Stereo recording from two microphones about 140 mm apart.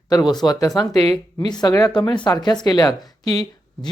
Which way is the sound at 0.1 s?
30° left (ahead or behind).